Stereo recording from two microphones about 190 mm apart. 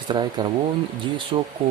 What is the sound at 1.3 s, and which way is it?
Speech, 25° right (ahead or behind).